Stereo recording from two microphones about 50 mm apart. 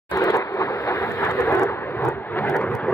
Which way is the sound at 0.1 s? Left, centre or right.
Left.